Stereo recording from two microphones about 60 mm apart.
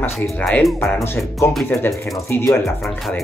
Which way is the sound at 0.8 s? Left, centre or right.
Left.